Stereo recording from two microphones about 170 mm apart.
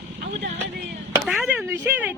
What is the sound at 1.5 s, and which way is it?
Speech, 10° right (ahead or behind).